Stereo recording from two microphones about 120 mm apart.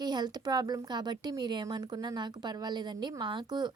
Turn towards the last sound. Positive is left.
turn(degrees=-35)  # may be behind; listen again after turning